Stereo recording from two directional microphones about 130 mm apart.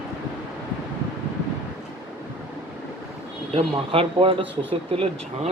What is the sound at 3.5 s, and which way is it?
Speech, 45° right (ahead or behind).